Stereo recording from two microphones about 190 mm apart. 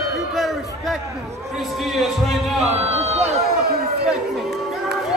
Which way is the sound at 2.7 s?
35° right (ahead or behind).